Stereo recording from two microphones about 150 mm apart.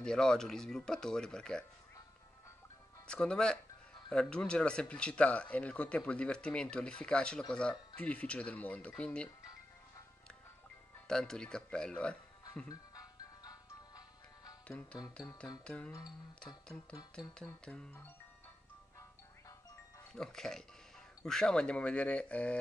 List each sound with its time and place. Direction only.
0.0 s speech: 5° left (ahead or behind)
3.1 s speech: 5° left (ahead or behind)
11.1 s speech: 5° left (ahead or behind)
12.6 s music: 25° left (ahead or behind)
15.6 s speech: 5° left (ahead or behind)
17.6 s speech: 5° left (ahead or behind)
20.1 s speech: 5° left (ahead or behind)